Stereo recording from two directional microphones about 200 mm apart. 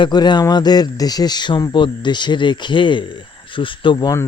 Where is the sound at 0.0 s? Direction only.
20° left (ahead or behind).